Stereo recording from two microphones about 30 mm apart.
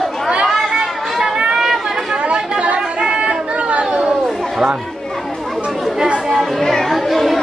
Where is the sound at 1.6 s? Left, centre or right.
Centre.